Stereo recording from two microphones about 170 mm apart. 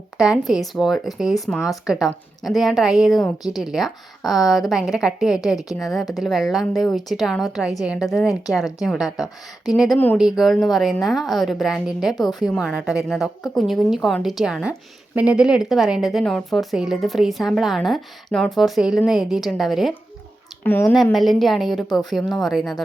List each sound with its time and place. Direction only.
0.2 s a woman's voice: centre (ahead or behind)
3.2 s speech: 20° left (ahead or behind)
3.6 s a woman's voice: centre (ahead or behind)
20.7 s a woman's voice: 10° left (ahead or behind)
20.9 s a woman's voice: centre (ahead or behind)